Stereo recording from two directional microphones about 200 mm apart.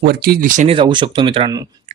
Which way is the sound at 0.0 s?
50° right (ahead or behind).